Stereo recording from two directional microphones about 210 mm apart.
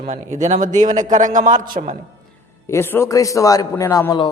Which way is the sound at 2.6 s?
10° left (ahead or behind).